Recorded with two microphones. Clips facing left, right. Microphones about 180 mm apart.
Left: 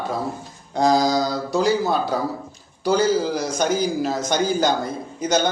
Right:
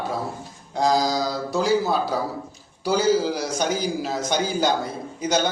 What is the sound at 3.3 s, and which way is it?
A man's voice, 50° left (ahead or behind).